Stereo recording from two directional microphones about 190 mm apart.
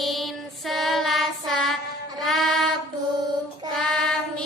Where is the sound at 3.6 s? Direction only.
20° right (ahead or behind).